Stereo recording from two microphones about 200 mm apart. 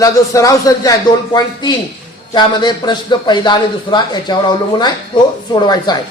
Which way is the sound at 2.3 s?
20° left (ahead or behind).